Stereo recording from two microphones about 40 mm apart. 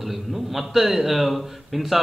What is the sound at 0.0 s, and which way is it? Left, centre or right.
A man's voice, centre.